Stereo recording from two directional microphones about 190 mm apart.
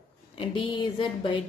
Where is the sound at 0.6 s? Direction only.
25° left (ahead or behind).